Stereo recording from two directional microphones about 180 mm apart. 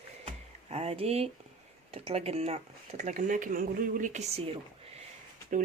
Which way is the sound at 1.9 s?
35° right (ahead or behind).